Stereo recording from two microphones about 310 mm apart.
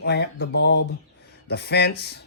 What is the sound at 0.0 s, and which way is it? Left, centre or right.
Speech, left.